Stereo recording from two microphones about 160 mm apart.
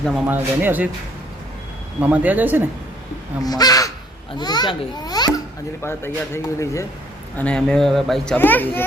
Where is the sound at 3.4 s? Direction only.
25° left (ahead or behind).